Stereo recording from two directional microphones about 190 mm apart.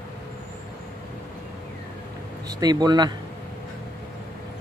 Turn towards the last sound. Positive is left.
turn(degrees=-20)  # may be behind; listen again after turning